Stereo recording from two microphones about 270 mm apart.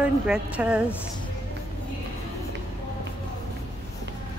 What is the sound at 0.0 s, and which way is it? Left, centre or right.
Speech, centre.